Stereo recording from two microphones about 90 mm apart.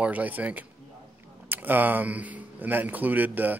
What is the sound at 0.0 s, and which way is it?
A man's voice, 15° right (ahead or behind).